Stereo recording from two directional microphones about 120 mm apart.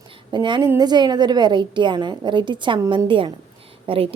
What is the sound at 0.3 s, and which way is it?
A woman's voice, 40° right (ahead or behind).